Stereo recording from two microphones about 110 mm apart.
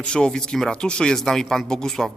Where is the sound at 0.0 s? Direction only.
5° left (ahead or behind).